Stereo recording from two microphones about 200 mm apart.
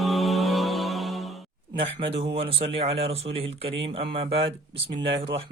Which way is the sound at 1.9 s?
30° right (ahead or behind).